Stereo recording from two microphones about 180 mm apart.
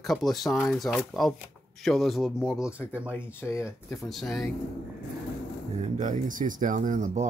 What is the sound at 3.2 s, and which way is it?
Speech, 15° left (ahead or behind).